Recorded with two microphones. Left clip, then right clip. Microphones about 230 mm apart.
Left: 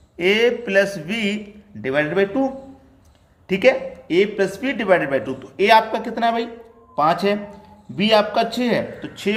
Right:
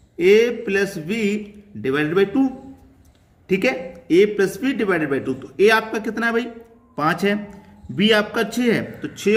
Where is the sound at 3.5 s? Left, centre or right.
Centre.